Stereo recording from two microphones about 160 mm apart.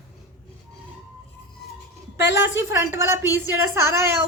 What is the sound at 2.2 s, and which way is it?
Speech, 90° left.